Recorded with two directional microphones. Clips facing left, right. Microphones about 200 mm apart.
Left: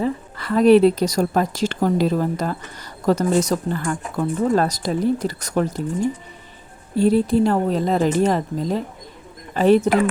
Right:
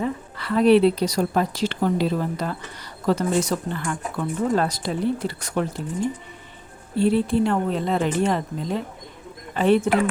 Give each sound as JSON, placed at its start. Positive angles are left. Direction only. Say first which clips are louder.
{"t": 0.3, "sound": "a woman's voice", "louder": "left 3 dB", "side_deg": 45}
{"t": 6.9, "sound": "speech", "louder": "left 3 dB", "side_deg": 40}